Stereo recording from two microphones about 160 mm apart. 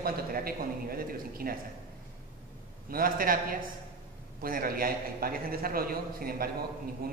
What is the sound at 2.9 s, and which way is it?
A man's voice, 65° right (ahead or behind).